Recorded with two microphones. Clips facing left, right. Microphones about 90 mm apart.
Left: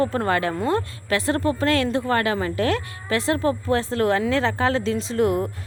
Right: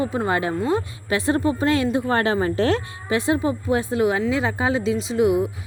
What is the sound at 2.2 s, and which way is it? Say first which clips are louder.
A woman's voice: right 2 dB; 30° right (ahead or behind).